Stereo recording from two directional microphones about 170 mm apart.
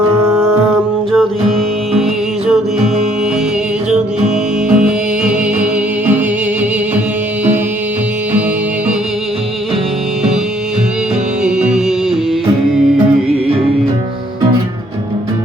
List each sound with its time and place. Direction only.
0.3 s music: 15° right (ahead or behind)
4.7 s music: 5° right (ahead or behind)
11.4 s music: 5° right (ahead or behind)